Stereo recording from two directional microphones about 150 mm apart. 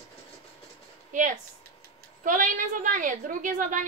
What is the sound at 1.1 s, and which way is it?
A woman's voice, 60° right (ahead or behind).